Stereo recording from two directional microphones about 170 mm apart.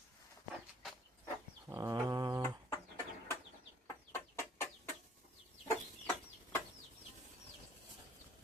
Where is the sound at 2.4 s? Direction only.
15° left (ahead or behind).